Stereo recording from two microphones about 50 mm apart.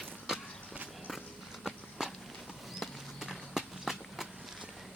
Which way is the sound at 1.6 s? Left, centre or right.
Centre.